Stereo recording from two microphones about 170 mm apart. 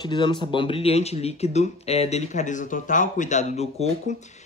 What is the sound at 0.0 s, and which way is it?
Speech, 25° left (ahead or behind).